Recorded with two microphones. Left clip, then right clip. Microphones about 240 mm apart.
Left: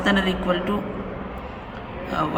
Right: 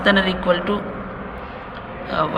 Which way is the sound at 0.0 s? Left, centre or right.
Centre.